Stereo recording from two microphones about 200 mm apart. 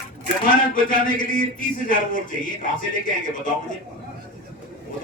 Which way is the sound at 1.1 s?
45° left (ahead or behind).